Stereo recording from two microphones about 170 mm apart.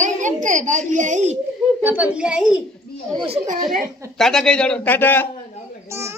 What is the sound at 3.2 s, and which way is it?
Speech, 35° right (ahead or behind).